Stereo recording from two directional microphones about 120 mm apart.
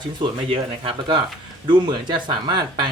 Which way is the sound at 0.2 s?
45° right (ahead or behind).